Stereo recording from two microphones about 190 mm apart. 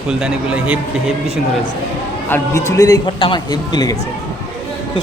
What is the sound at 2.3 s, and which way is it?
A man's voice, 15° left (ahead or behind).